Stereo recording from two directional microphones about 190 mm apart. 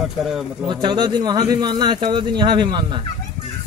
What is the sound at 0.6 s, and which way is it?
Speech, 25° right (ahead or behind).